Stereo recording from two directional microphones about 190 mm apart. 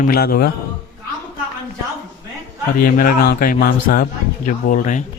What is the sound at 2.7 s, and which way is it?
A man's voice, 50° left (ahead or behind).